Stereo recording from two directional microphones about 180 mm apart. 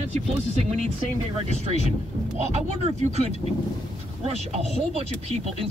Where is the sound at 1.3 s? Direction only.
35° right (ahead or behind).